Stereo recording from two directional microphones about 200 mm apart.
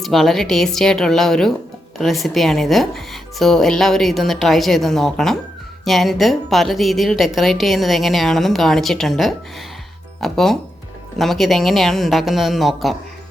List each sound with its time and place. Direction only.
0.0 s a woman's voice: centre (ahead or behind)